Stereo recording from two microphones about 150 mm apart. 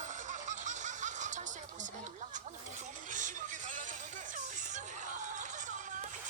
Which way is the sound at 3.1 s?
60° right (ahead or behind).